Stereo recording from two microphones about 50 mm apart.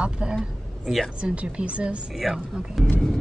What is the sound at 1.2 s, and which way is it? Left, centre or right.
Speech, right.